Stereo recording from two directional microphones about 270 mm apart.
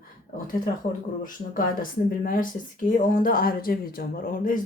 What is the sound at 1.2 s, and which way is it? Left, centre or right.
Speech, left.